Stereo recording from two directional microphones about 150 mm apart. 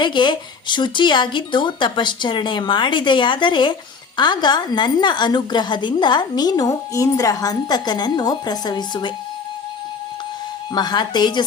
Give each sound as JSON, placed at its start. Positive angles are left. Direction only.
{"t": 0.0, "sound": "a woman's voice", "side_deg": 30}
{"t": 10.8, "sound": "a woman's voice", "side_deg": 30}